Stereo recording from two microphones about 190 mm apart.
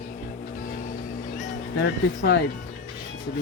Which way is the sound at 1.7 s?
60° left (ahead or behind).